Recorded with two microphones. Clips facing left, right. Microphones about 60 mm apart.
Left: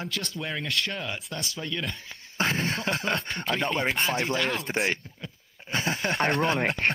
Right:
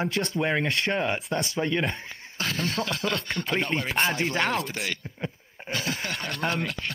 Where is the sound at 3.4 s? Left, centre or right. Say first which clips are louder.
Right 2 dB; left.